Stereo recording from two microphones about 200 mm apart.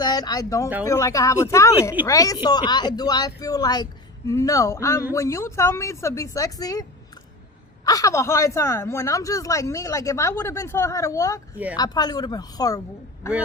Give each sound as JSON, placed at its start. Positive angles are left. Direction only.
{"t": 0.0, "sound": "a woman's voice", "side_deg": 20}
{"t": 7.9, "sound": "a woman's voice", "side_deg": 15}
{"t": 11.5, "sound": "speech", "side_deg": -5}
{"t": 11.8, "sound": "speech", "side_deg": 20}